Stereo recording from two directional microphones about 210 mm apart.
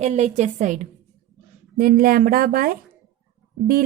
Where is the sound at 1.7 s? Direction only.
45° right (ahead or behind).